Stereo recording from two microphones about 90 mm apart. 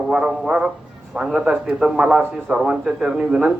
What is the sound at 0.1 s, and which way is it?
A man's voice, 10° right (ahead or behind).